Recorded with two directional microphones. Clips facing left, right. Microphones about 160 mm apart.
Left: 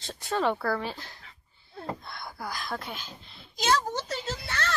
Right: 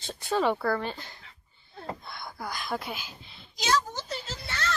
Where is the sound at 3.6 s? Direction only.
55° left (ahead or behind).